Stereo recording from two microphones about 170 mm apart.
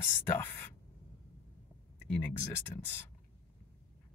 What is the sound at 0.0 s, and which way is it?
Speech, 15° left (ahead or behind).